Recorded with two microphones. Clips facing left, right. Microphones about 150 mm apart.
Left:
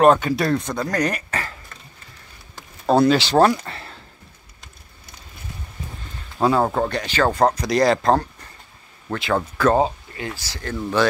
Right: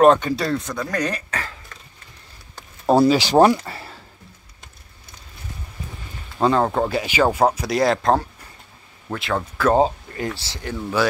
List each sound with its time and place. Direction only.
0.0 s speech: 5° left (ahead or behind)
0.7 s speech: 20° left (ahead or behind)
2.5 s speech: 10° right (ahead or behind)
3.6 s a sound: 5° right (ahead or behind)
6.4 s speech: 5° left (ahead or behind)
10.1 s speech: 40° right (ahead or behind)
10.4 s speech: 20° right (ahead or behind)